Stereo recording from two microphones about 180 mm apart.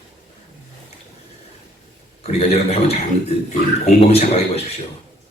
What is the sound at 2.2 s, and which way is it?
Speech, 35° left (ahead or behind).